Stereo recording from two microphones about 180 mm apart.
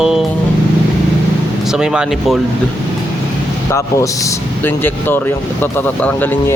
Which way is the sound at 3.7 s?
15° left (ahead or behind).